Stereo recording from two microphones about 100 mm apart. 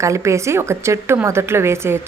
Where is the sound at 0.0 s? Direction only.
30° right (ahead or behind).